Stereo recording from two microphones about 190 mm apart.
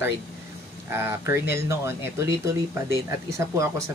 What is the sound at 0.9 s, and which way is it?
Speech, 10° right (ahead or behind).